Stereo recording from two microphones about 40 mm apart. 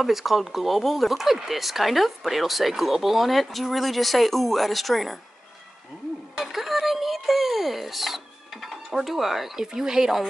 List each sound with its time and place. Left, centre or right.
0.0 s speech: centre
6.4 s a sound: centre
9.7 s speech: centre